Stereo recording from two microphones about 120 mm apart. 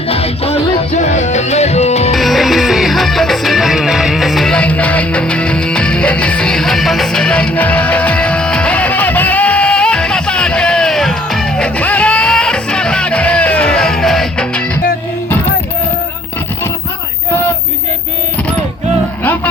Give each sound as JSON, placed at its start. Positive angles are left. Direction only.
{"t": 0.1, "sound": "music", "side_deg": 55}
{"t": 2.1, "sound": "music", "side_deg": 0}